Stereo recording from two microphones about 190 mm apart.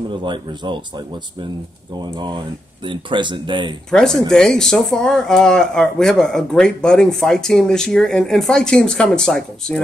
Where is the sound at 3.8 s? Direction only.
5° left (ahead or behind).